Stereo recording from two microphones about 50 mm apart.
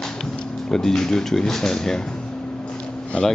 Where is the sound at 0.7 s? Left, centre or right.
Centre.